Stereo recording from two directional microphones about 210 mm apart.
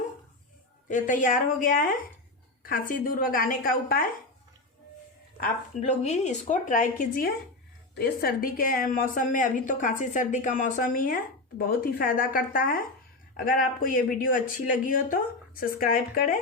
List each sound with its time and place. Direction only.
0.9 s a woman's voice: 40° left (ahead or behind)
5.4 s a woman's voice: 35° left (ahead or behind)